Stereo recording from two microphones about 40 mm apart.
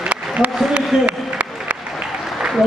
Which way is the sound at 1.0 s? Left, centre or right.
Right.